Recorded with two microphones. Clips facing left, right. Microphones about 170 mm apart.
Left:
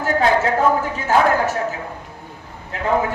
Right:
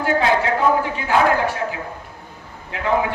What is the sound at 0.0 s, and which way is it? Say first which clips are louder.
A woman's voice: left 1 dB; 45° left (ahead or behind).